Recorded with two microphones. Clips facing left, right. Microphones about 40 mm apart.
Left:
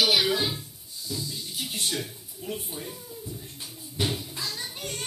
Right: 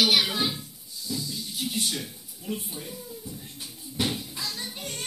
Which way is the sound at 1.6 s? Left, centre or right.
Left.